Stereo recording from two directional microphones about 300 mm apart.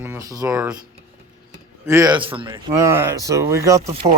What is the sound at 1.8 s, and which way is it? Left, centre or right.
Speech, centre.